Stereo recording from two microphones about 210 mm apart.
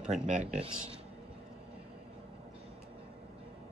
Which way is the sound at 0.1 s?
35° right (ahead or behind).